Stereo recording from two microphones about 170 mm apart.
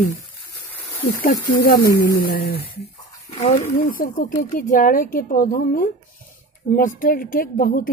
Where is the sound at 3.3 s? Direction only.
40° left (ahead or behind); by 7.9 s 55° left (ahead or behind).